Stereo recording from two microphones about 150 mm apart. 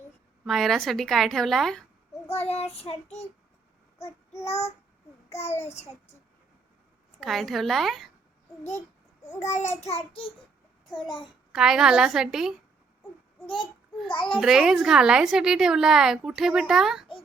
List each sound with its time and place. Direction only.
0.4 s a woman's voice: centre (ahead or behind)
2.3 s child singing: 45° left (ahead or behind)
4.4 s child singing: 45° left (ahead or behind)
7.2 s a woman's voice: centre (ahead or behind)
9.4 s child singing: 50° left (ahead or behind)
11.0 s a child's voice: 30° left (ahead or behind)
11.5 s a woman's voice: 5° right (ahead or behind)
14.1 s a child's voice: 35° left (ahead or behind)
14.4 s a woman's voice: 5° right (ahead or behind)